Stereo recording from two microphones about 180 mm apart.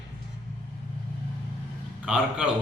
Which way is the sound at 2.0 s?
5° right (ahead or behind).